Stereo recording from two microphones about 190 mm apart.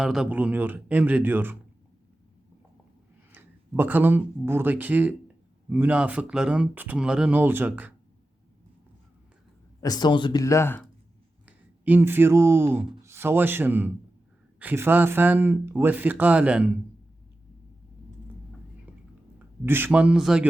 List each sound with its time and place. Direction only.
0.0 s speech: 5° right (ahead or behind)
3.3 s speech: 10° right (ahead or behind)
9.8 s speech: 20° left (ahead or behind)
11.4 s speech: 10° right (ahead or behind)
19.6 s speech: 10° right (ahead or behind)